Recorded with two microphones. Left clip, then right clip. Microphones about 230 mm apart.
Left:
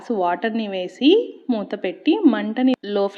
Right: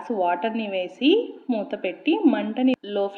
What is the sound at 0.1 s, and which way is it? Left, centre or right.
A woman's voice, left.